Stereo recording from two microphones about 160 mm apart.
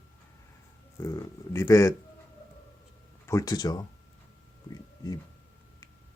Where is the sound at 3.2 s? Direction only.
20° left (ahead or behind).